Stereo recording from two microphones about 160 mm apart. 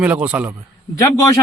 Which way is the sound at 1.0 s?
20° left (ahead or behind).